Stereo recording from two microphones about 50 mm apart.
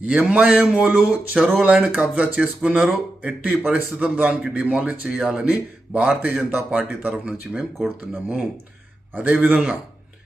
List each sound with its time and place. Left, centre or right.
0.0 s speech: right
1.4 s speech: centre
1.6 s speech: right
5.4 s speech: right